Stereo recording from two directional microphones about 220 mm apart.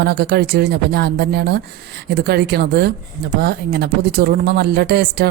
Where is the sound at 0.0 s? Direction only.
45° right (ahead or behind).